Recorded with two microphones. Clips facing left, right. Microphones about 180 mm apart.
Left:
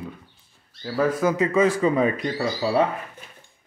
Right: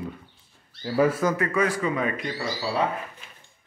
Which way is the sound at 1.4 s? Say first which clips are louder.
Left 5 dB; 25° left (ahead or behind).